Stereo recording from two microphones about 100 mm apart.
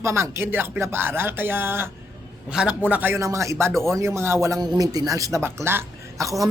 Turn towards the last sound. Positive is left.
turn(degrees=-30)  # may be behind; listen again after turning